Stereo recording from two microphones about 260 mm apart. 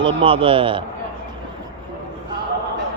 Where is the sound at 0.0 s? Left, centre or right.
Centre.